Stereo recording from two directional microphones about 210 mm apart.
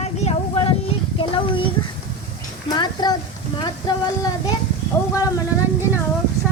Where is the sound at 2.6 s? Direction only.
20° left (ahead or behind).